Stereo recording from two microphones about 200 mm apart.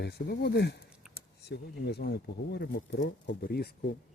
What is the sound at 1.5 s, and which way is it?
A man's voice, 55° left (ahead or behind).